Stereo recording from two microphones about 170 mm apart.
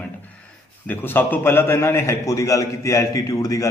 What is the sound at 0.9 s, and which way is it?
A man's voice, 10° left (ahead or behind).